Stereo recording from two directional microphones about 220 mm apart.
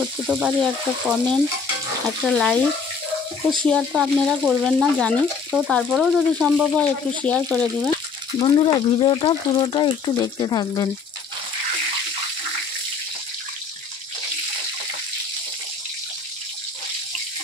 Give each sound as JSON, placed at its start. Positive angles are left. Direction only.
{"t": 0.0, "sound": "speech", "side_deg": -5}
{"t": 3.6, "sound": "speech", "side_deg": 0}
{"t": 8.4, "sound": "speech", "side_deg": 25}